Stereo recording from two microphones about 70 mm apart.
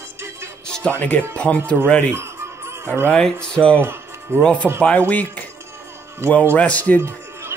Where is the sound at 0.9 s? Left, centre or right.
Left.